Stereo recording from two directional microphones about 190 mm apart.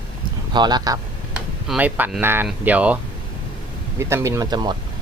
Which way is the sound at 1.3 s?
5° right (ahead or behind).